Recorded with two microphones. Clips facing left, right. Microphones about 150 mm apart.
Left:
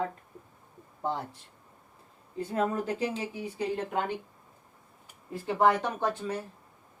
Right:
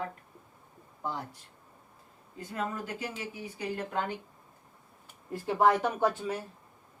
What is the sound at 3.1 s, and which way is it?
Speech, 30° left (ahead or behind).